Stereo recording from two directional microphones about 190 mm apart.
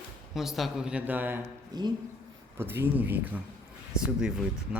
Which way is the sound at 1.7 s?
20° right (ahead or behind).